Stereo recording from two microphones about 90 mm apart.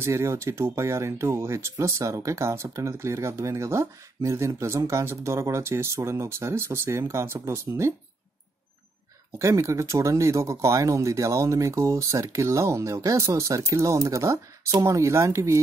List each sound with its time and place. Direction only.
0.0 s speech: 30° right (ahead or behind)
9.4 s speech: 35° right (ahead or behind)